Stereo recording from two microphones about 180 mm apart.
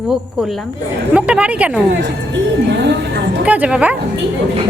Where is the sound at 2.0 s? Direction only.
75° right (ahead or behind).